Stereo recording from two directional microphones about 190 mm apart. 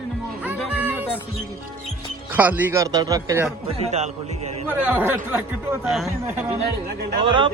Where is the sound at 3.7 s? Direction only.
35° right (ahead or behind).